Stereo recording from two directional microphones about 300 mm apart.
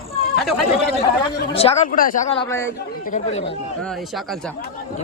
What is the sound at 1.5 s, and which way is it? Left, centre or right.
A man's voice, left.